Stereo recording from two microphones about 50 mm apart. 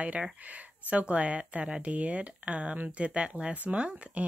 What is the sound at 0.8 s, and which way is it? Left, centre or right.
Speech, right.